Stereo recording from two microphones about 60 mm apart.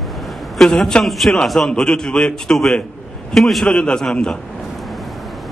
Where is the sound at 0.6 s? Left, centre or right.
Centre.